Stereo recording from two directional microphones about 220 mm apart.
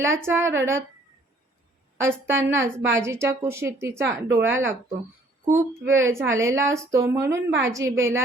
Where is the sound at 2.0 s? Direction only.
10° right (ahead or behind).